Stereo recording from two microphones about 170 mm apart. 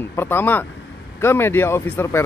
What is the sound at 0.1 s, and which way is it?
Speech, 15° left (ahead or behind).